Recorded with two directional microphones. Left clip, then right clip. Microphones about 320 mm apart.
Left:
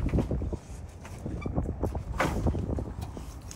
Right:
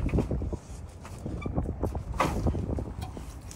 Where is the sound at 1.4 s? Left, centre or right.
Centre.